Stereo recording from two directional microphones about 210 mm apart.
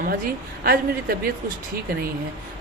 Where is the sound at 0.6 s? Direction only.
45° right (ahead or behind).